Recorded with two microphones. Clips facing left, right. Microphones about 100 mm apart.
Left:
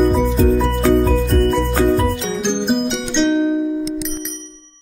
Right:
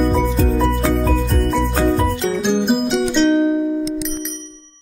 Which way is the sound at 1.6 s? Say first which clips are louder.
Left 1 dB; centre (ahead or behind).